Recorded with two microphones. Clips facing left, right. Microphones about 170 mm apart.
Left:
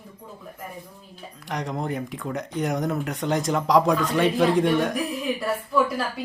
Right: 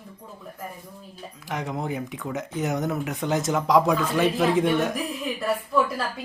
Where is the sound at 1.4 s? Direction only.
Centre (ahead or behind).